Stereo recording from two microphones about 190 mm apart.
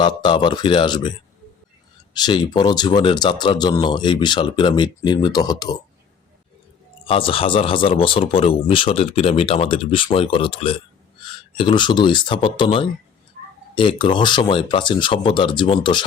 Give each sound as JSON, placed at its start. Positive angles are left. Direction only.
{"t": 0.0, "sound": "speech", "side_deg": 25}
{"t": 2.1, "sound": "speech", "side_deg": 25}
{"t": 7.0, "sound": "speech", "side_deg": 30}